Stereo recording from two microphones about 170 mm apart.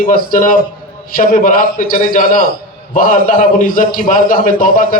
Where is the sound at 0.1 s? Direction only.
55° left (ahead or behind).